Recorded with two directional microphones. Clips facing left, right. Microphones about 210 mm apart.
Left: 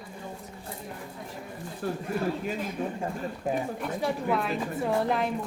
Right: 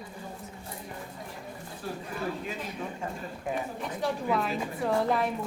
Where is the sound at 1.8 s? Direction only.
55° left (ahead or behind).